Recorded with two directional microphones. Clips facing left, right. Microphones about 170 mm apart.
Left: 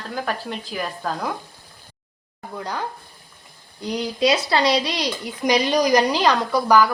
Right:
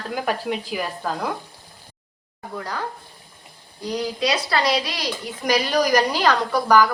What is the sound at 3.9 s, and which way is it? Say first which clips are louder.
Speech: left 3 dB; 25° left (ahead or behind).